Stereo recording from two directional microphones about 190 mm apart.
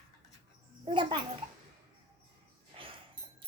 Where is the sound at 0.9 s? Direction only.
25° right (ahead or behind).